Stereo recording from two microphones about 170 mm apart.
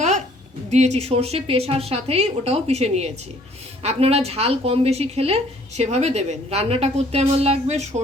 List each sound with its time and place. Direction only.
0.7 s speech: 40° right (ahead or behind)